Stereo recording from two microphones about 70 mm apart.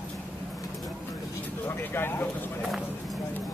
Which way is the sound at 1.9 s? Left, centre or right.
Left.